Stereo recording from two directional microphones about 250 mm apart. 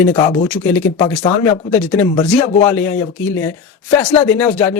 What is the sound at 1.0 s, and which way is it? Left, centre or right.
Speech, centre.